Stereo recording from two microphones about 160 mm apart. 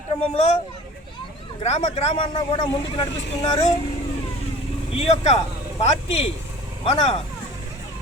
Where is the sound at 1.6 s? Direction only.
40° left (ahead or behind).